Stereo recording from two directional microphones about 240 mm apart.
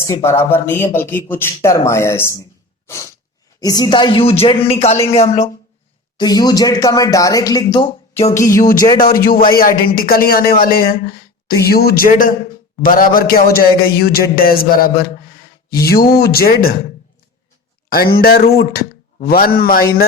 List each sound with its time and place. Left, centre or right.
0.0 s speech: centre
2.8 s sneeze: centre
3.6 s speech: centre
6.1 s speech: centre
8.3 s speech: centre
9.0 s a man's voice: left
17.8 s a man's voice: left